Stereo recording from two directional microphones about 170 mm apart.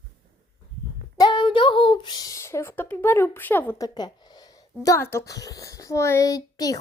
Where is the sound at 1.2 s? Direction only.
25° left (ahead or behind).